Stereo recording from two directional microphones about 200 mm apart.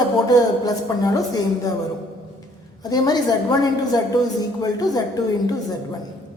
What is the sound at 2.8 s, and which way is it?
A woman's voice, 20° left (ahead or behind).